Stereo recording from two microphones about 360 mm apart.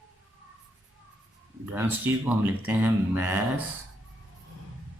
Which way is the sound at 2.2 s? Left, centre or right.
Centre.